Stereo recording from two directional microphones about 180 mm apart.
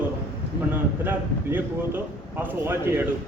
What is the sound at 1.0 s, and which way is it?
Speech, 10° right (ahead or behind).